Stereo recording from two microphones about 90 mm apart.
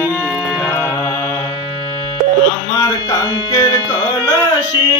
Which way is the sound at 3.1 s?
45° left (ahead or behind).